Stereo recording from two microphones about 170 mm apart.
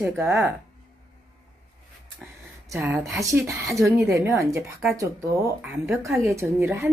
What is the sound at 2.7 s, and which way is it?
Speech, 10° right (ahead or behind).